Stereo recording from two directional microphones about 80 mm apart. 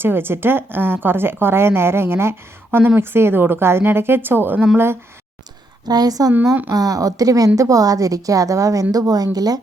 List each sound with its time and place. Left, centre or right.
0.0 s a woman's voice: right
5.9 s a woman's voice: right